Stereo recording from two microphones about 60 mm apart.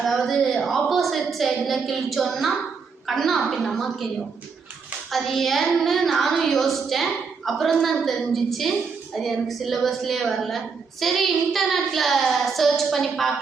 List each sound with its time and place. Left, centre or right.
0.0 s a woman's voice: centre
5.1 s a child's voice: centre